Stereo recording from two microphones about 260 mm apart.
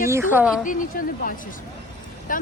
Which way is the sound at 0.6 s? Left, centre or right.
Left.